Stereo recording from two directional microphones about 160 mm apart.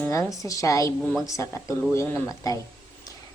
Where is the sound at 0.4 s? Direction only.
20° left (ahead or behind).